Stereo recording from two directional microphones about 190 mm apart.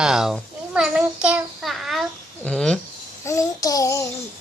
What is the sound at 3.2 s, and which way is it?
Child singing, 15° left (ahead or behind).